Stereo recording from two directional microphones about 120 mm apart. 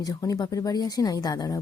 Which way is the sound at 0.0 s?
30° left (ahead or behind).